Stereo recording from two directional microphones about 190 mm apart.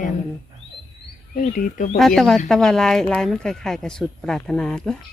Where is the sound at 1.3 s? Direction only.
45° left (ahead or behind).